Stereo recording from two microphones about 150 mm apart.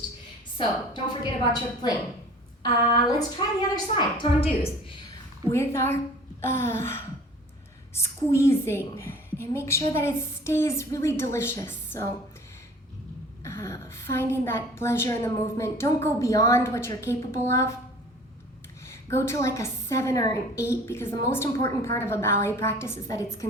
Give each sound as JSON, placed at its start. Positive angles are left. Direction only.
{"t": 0.5, "sound": "a woman's voice", "side_deg": 30}
{"t": 2.6, "sound": "a woman's voice", "side_deg": 25}
{"t": 5.5, "sound": "a woman's voice", "side_deg": 15}
{"t": 13.4, "sound": "a woman's voice", "side_deg": 20}
{"t": 18.9, "sound": "a woman's voice", "side_deg": 20}